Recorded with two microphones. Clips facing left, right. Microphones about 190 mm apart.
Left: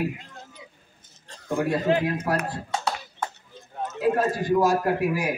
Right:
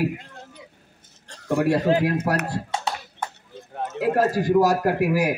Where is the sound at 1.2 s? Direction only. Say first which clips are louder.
Right 4 dB; 70° right (ahead or behind).